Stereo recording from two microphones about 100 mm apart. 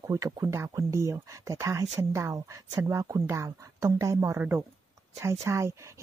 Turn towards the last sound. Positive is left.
turn(degrees=-30)  # may be behind; listen again after turning